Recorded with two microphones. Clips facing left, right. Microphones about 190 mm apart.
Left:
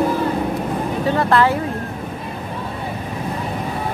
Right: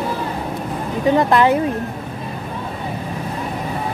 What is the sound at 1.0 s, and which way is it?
Speech, 15° right (ahead or behind).